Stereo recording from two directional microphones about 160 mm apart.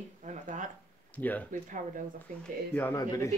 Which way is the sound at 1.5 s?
55° right (ahead or behind).